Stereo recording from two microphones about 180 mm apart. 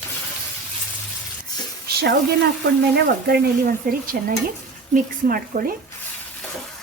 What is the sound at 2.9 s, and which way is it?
Stir, 65° right (ahead or behind).